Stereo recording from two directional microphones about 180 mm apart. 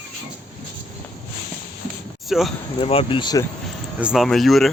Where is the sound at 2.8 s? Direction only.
30° left (ahead or behind).